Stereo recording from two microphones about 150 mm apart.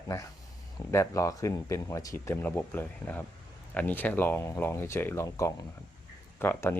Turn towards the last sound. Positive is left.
turn(degrees=15)  # may be behind; listen again after turning